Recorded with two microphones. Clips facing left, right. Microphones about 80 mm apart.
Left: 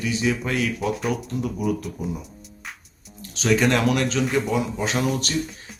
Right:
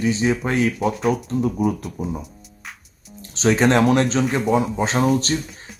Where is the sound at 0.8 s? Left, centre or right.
Centre.